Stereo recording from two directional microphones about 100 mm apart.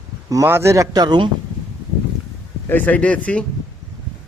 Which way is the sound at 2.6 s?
15° left (ahead or behind).